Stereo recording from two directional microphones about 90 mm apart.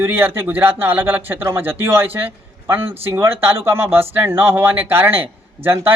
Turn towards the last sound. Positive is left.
turn(degrees=-25)  # may be behind; listen again after turning